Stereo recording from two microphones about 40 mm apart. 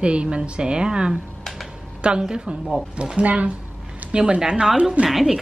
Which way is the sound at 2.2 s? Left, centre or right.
Right.